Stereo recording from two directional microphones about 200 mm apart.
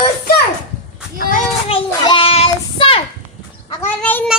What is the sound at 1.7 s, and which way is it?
Child singing, 25° left (ahead or behind).